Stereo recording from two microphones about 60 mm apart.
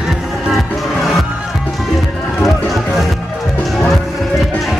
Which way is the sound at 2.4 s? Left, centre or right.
Centre.